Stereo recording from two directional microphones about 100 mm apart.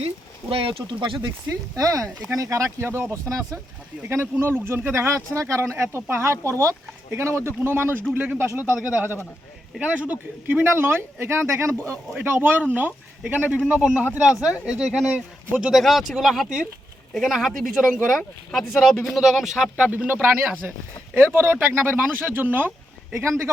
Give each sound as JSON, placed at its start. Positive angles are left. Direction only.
{"t": 0.5, "sound": "speech", "side_deg": -70}
{"t": 1.7, "sound": "speech", "side_deg": -35}
{"t": 21.3, "sound": "speech", "side_deg": -20}